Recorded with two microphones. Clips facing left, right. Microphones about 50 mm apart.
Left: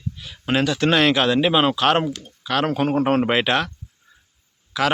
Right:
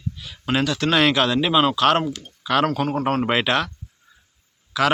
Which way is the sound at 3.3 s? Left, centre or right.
Centre.